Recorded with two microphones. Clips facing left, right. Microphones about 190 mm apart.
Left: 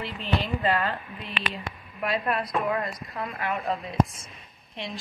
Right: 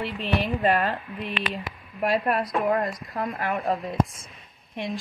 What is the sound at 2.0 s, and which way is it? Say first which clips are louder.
Speech: right 4 dB; 40° right (ahead or behind).